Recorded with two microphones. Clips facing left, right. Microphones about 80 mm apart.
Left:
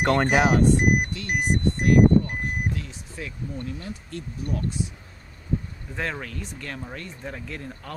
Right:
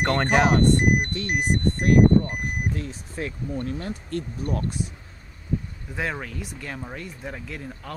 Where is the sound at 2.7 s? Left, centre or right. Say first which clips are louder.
Right 3 dB; right.